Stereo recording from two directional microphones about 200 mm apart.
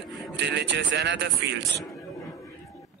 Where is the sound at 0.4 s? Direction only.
60° right (ahead or behind).